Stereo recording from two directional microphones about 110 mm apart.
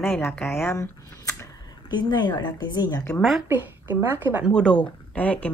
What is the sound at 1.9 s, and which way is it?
Speech, 40° left (ahead or behind).